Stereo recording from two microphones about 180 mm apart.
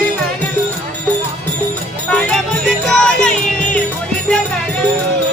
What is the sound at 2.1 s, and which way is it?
Music, 5° left (ahead or behind).